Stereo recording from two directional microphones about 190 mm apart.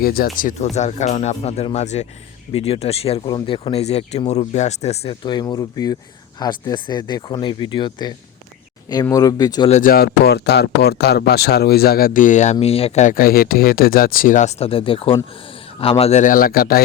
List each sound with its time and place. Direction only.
0.0 s speech: 50° left (ahead or behind); by 9.6 s 20° left (ahead or behind)
9.6 s speech: 35° left (ahead or behind)
9.9 s speech: 55° left (ahead or behind)